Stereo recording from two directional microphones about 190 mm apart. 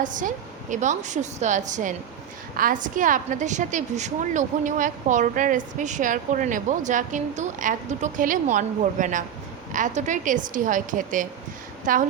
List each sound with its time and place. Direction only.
0.0 s a woman's voice: 45° right (ahead or behind)